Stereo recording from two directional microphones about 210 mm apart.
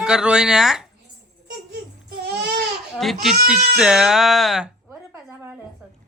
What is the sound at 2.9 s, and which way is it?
A woman's voice, centre (ahead or behind).